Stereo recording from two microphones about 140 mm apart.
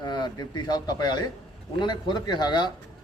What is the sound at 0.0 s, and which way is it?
Speech, 30° left (ahead or behind).